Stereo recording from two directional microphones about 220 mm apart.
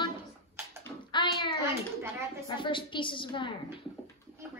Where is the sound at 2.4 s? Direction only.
20° left (ahead or behind).